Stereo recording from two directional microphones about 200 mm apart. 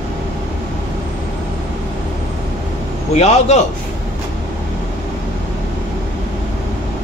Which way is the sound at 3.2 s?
35° left (ahead or behind).